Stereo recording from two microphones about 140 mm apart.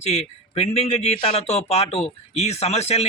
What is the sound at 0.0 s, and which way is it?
A man's voice, 50° left (ahead or behind).